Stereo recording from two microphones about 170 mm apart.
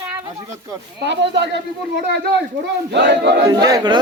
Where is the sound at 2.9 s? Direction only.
90° right.